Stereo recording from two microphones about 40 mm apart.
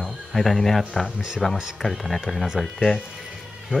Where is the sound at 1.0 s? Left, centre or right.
Right.